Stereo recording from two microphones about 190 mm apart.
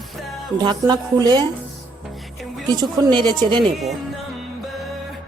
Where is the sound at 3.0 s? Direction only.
25° right (ahead or behind).